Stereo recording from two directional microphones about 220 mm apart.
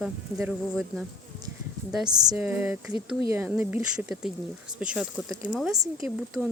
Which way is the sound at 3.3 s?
10° right (ahead or behind).